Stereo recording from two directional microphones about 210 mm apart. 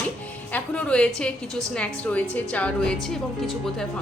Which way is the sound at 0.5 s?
5° left (ahead or behind).